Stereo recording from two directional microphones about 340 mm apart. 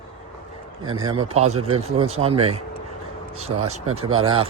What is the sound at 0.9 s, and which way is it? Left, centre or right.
Speech, right.